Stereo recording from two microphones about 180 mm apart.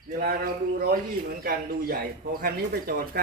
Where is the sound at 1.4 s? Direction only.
60° right (ahead or behind).